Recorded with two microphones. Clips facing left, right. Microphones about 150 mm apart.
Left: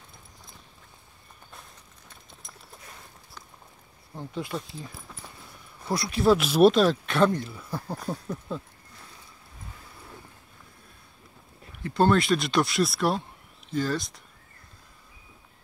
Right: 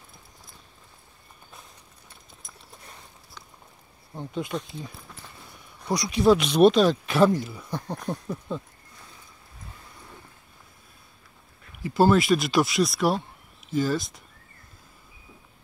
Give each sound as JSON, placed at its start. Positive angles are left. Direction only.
{"t": 4.3, "sound": "speech", "side_deg": -20}
{"t": 5.8, "sound": "speech", "side_deg": 0}
{"t": 11.8, "sound": "speech", "side_deg": -5}